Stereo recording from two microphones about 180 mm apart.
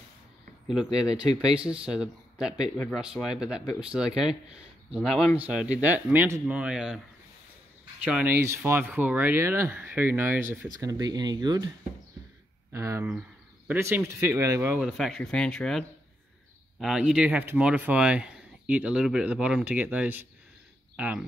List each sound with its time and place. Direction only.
0.9 s speech: 5° right (ahead or behind)
8.1 s speech: 10° right (ahead or behind)
12.7 s speech: 15° right (ahead or behind); by 15.8 s 5° left (ahead or behind)
16.8 s speech: 5° right (ahead or behind)